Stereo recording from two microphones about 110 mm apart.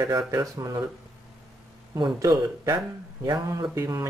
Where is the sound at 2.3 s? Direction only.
40° right (ahead or behind).